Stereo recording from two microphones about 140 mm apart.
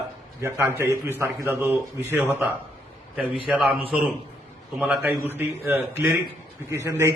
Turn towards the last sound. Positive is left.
turn(degrees=-20)  # may be behind; listen again after turning